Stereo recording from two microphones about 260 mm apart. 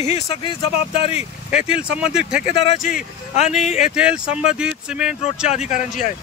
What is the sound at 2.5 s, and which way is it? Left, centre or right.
Speech, left.